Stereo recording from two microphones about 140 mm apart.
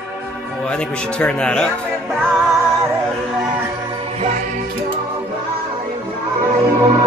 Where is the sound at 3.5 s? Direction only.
35° right (ahead or behind).